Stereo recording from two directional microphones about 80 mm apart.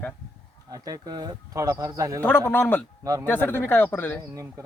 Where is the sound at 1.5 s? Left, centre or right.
Right.